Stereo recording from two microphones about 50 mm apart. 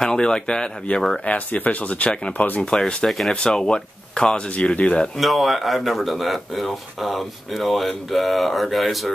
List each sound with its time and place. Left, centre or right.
0.0 s speech: centre
1.2 s speech: left
2.6 s speech: centre
3.1 s speech: centre
3.3 s speech: centre
5.1 s speech: centre